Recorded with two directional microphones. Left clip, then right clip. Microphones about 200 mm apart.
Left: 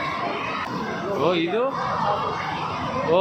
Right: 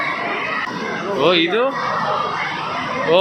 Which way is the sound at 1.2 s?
5° left (ahead or behind).